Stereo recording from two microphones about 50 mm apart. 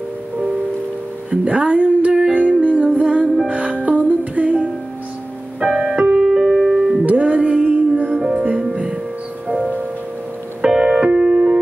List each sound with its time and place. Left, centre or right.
1.3 s music: right
5.8 s music: right
6.3 s music: centre
7.1 s music: right
10.6 s music: centre